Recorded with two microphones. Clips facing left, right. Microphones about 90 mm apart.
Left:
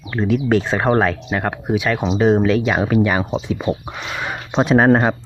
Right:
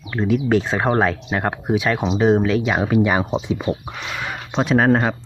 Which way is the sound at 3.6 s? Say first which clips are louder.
Left 2 dB; 25° left (ahead or behind).